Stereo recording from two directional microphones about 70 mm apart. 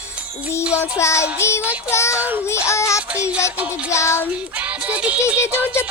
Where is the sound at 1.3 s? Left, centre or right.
Left.